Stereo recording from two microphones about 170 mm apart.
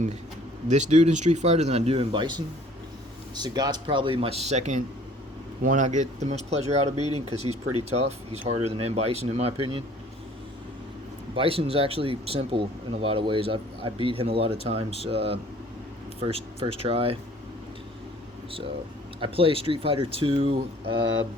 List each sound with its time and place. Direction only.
0.7 s speech: 40° right (ahead or behind)
11.3 s speech: 35° right (ahead or behind)
19.2 s speech: 30° right (ahead or behind)